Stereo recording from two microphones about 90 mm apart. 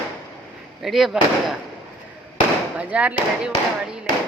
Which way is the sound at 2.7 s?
15° right (ahead or behind).